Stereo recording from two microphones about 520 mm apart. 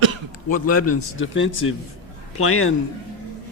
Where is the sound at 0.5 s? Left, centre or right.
Left.